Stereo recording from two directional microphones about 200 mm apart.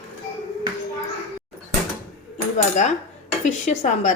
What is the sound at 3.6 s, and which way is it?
Dishes, 35° left (ahead or behind).